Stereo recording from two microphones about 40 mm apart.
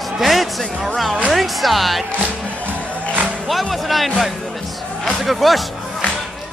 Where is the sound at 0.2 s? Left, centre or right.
Centre.